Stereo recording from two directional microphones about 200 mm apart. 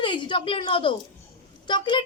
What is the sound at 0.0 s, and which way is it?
A woman's voice, 25° left (ahead or behind).